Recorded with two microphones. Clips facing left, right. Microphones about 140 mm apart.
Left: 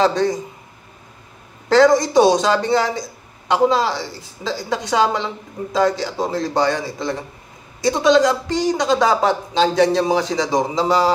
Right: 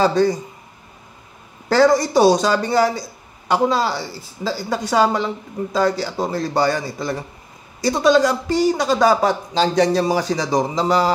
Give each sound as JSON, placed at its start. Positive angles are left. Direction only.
{"t": 0.0, "sound": "a man's voice", "side_deg": -5}
{"t": 1.7, "sound": "a man's voice", "side_deg": -5}